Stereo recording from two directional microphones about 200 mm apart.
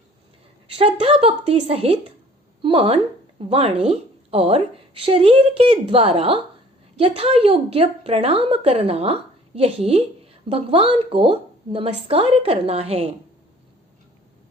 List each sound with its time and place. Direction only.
0.7 s a woman's voice: 30° right (ahead or behind)